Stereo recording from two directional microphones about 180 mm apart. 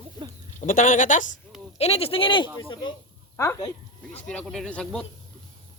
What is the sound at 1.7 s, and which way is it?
Speech, 35° left (ahead or behind).